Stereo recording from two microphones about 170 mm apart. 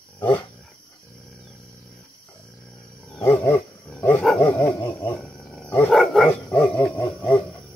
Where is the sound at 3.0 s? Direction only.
10° left (ahead or behind).